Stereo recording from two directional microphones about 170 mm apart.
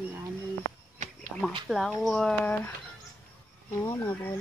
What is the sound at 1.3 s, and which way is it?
Speech, 5° right (ahead or behind).